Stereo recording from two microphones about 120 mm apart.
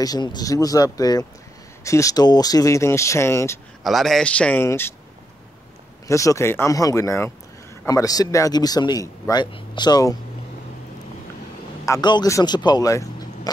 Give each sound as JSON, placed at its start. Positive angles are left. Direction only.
{"t": 0.0, "sound": "a man's voice", "side_deg": 35}
{"t": 3.8, "sound": "a man's voice", "side_deg": 0}
{"t": 6.0, "sound": "a man's voice", "side_deg": 25}
{"t": 12.0, "sound": "a man's voice", "side_deg": 40}